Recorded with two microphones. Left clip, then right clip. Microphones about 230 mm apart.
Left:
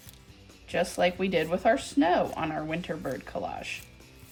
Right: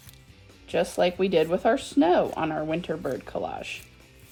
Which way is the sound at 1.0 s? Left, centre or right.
Centre.